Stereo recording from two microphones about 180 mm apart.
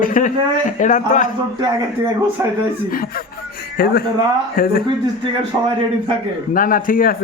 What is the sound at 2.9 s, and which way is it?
A man's voice, 55° left (ahead or behind).